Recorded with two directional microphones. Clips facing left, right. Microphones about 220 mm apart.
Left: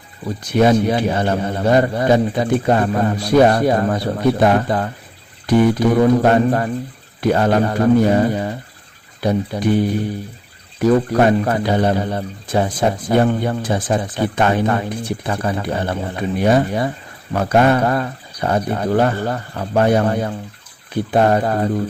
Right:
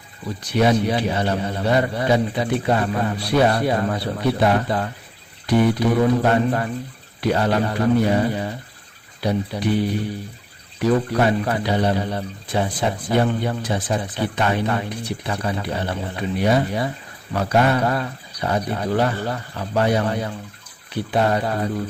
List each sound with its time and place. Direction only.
0.5 s speech: 50° left (ahead or behind)